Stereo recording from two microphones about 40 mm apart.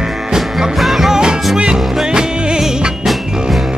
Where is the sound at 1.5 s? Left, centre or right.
Right.